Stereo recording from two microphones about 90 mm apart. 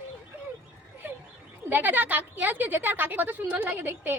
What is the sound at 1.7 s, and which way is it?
A woman's voice, 20° right (ahead or behind).